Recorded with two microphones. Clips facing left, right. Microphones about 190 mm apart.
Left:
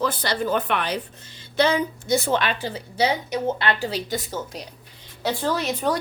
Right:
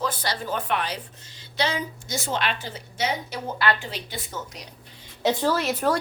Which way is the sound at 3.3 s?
25° left (ahead or behind).